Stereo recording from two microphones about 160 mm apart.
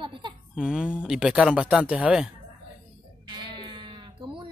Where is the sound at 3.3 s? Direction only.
30° right (ahead or behind).